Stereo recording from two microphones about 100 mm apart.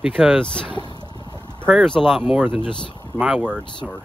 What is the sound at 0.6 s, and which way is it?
Speech, 50° left (ahead or behind).